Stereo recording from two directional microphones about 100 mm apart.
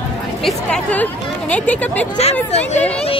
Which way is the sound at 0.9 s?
15° left (ahead or behind).